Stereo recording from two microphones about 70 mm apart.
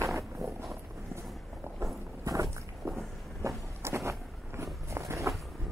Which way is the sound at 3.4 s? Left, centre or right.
Right.